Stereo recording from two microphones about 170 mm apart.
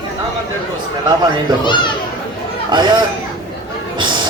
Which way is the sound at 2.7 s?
25° right (ahead or behind).